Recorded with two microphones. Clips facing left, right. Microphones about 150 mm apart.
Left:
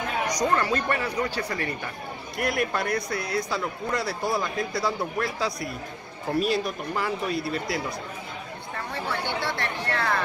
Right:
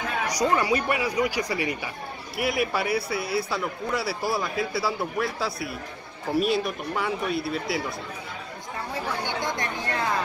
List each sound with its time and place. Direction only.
0.3 s a man's voice: 10° right (ahead or behind)
8.9 s speech: 15° right (ahead or behind)